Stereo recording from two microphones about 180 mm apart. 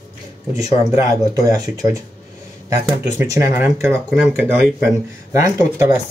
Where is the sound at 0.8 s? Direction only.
20° right (ahead or behind).